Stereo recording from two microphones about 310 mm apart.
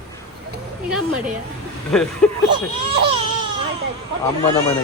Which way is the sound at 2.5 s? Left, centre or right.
Centre.